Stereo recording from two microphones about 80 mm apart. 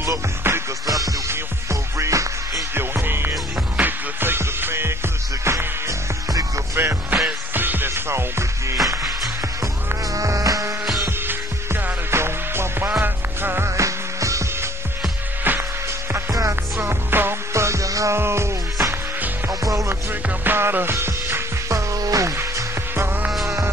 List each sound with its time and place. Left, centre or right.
0.0 s music: right
0.8 s music: right
2.7 s music: right
6.8 s music: right
11.1 s music: right
15.5 s music: right
16.1 s music: right
17.1 s music: right
20.1 s music: right
22.4 s music: right
23.3 s music: centre